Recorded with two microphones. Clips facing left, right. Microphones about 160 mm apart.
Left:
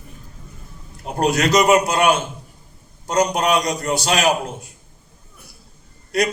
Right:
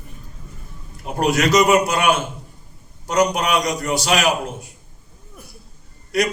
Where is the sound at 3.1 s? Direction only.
35° left (ahead or behind).